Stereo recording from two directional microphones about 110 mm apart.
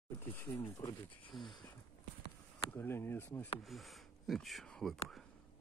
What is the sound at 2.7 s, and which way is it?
Speech, 20° left (ahead or behind).